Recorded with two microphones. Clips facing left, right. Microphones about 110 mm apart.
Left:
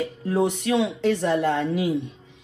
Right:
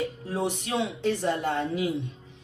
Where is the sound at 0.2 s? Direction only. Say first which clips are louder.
Left 7 dB; 65° left (ahead or behind).